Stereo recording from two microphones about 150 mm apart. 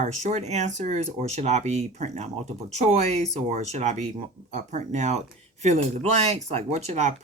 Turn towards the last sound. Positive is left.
turn(degrees=-45)  # may be behind; listen again after turning